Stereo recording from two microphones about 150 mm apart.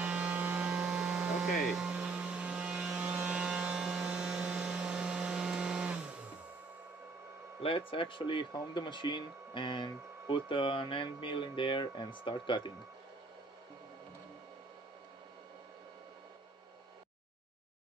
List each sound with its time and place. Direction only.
0.0 s hum: 10° right (ahead or behind)
7.6 s speech: 35° left (ahead or behind)